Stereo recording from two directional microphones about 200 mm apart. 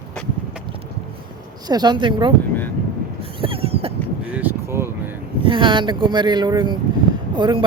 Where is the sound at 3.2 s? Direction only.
25° right (ahead or behind).